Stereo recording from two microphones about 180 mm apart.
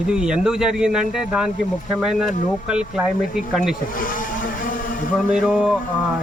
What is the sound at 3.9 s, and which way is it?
Vehicle, 50° left (ahead or behind).